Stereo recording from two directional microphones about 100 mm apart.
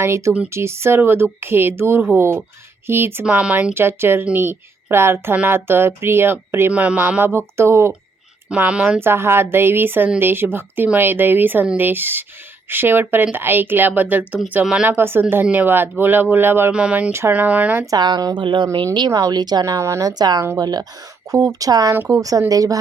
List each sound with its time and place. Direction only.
0.0 s speech: 30° right (ahead or behind)
3.2 s speech: 15° right (ahead or behind)
8.4 s speech: 15° right (ahead or behind)
14.8 s speech: 25° right (ahead or behind)
16.7 s speech: 10° right (ahead or behind)
17.1 s speech: 25° right (ahead or behind)
17.3 s speech: 15° right (ahead or behind)
17.9 s a woman's voice: 45° right (ahead or behind)